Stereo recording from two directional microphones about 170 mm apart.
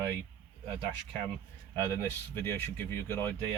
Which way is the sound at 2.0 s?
15° left (ahead or behind).